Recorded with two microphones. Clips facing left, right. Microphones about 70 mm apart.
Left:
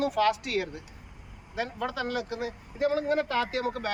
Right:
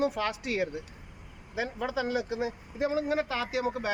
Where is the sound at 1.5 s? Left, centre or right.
Centre.